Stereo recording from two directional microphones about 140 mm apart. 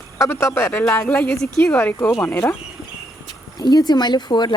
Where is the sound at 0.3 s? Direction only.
20° left (ahead or behind).